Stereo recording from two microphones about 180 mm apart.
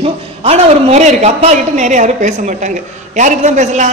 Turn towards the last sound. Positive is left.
turn(degrees=-40)  # may be behind; listen again after turning